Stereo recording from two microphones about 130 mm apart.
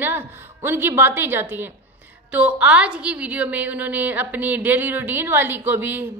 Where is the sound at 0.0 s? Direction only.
15° right (ahead or behind).